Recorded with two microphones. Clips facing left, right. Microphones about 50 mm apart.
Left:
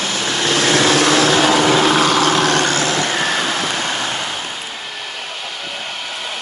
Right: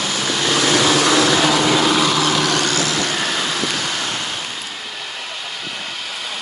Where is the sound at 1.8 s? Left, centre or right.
Left.